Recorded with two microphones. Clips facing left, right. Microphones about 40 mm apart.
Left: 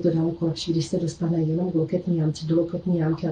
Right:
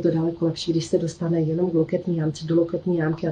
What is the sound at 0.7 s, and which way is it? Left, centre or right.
Speech, right.